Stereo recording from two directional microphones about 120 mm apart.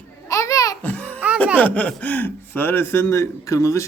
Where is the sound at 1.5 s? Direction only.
10° left (ahead or behind).